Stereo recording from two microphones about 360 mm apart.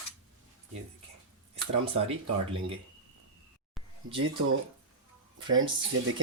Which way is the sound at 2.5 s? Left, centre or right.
Centre.